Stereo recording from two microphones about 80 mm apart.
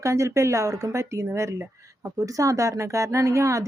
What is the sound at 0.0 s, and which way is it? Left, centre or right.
Speech, right.